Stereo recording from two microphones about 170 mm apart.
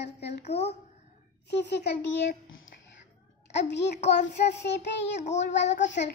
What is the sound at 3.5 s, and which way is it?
Child singing, 90° left.